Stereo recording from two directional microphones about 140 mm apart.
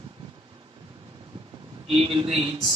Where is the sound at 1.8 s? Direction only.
40° right (ahead or behind).